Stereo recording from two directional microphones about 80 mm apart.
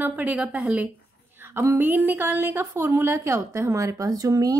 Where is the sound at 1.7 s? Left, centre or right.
Right.